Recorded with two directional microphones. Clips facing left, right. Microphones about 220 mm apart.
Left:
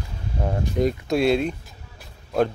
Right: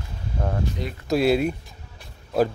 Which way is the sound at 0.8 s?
55° left (ahead or behind).